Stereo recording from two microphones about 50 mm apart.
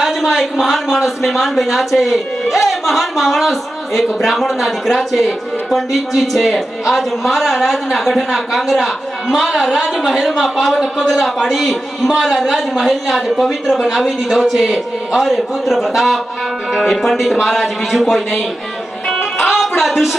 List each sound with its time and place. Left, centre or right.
0.2 s speech: centre
19.4 s music: centre